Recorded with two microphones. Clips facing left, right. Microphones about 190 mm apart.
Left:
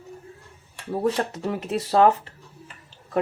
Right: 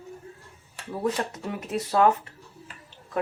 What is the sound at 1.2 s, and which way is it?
Speech, 35° left (ahead or behind).